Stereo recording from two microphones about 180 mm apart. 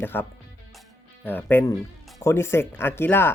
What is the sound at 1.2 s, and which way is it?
Speech, 10° left (ahead or behind).